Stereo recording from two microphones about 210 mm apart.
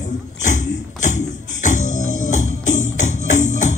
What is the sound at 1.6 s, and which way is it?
Music, 35° left (ahead or behind).